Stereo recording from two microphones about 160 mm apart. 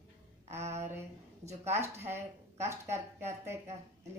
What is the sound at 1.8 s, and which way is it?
A woman's voice, 15° right (ahead or behind).